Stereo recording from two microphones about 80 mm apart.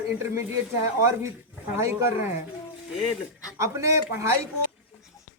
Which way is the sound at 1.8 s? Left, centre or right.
Right.